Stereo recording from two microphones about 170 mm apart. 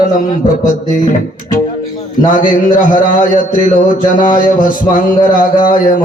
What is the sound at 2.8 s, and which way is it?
Speech, 50° left (ahead or behind).